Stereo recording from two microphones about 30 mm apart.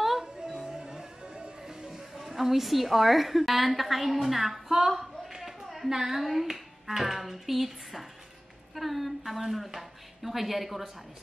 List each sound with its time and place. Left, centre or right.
0.5 s music: right
2.1 s a woman's voice: centre
4.7 s a sound: centre
5.9 s a woman's voice: centre